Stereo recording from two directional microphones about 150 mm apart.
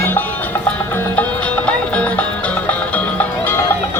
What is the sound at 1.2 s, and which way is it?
Music, 10° left (ahead or behind).